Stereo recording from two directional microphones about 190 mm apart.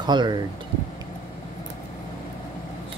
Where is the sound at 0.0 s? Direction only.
25° right (ahead or behind).